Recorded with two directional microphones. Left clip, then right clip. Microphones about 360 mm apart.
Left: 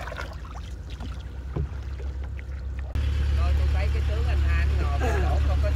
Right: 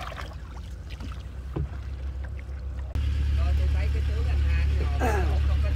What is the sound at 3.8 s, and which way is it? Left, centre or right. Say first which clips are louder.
Vehicle: left 4 dB; centre.